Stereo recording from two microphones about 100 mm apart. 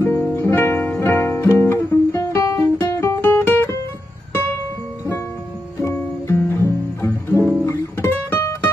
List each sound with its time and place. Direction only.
0.0 s music: 30° left (ahead or behind)
3.2 s music: 20° left (ahead or behind)
6.2 s music: 30° left (ahead or behind)
7.3 s guitar: 25° right (ahead or behind)
7.6 s music: 30° left (ahead or behind)